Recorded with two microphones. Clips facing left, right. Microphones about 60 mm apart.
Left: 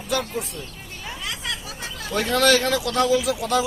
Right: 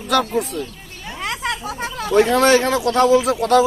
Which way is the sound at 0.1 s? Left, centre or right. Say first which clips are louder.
Right 8 dB; right.